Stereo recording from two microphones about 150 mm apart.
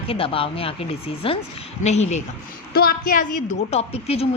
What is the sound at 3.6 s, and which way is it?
Speech, 45° left (ahead or behind).